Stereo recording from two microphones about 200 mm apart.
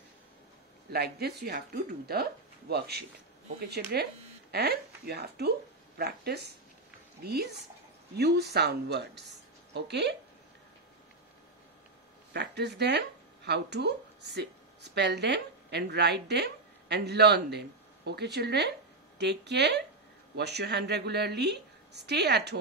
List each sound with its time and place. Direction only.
0.9 s a woman's voice: 55° right (ahead or behind)
8.2 s a woman's voice: 55° right (ahead or behind)
12.3 s a woman's voice: 55° right (ahead or behind)